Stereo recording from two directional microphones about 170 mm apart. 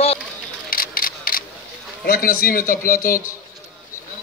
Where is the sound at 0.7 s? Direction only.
60° left (ahead or behind).